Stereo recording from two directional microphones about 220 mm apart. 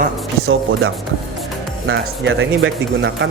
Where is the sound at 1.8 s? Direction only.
55° right (ahead or behind).